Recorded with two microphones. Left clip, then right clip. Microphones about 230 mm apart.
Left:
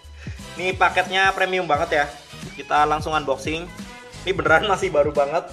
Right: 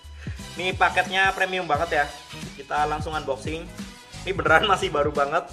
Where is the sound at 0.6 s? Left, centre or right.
Centre.